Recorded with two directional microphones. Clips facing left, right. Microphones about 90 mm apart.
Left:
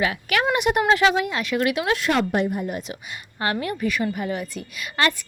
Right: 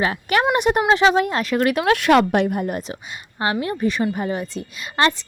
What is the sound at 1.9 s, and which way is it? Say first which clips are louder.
Speech: right 6 dB; 70° right (ahead or behind).